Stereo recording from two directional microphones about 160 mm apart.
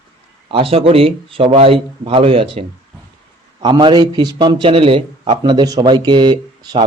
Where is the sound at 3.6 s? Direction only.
30° right (ahead or behind).